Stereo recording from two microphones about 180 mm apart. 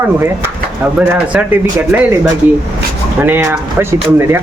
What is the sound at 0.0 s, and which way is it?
Speech, 15° right (ahead or behind).